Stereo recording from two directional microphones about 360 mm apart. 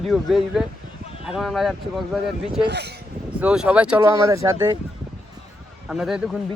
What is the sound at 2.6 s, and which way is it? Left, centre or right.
Speech, right.